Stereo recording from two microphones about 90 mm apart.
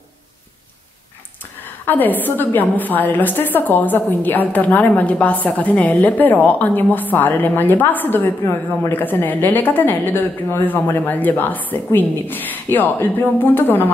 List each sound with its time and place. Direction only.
1.9 s a woman's voice: 20° left (ahead or behind)